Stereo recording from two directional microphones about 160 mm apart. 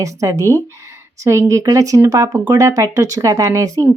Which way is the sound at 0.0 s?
20° right (ahead or behind).